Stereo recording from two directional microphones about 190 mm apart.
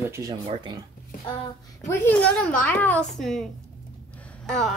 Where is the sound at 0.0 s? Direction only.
15° right (ahead or behind).